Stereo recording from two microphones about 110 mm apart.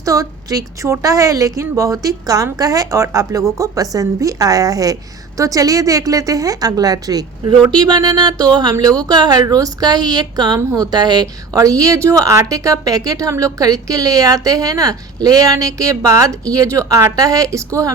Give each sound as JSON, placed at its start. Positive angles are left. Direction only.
{"t": 0.0, "sound": "a woman's voice", "side_deg": -30}
{"t": 10.6, "sound": "a woman's voice", "side_deg": -25}
{"t": 10.9, "sound": "a woman's voice", "side_deg": -40}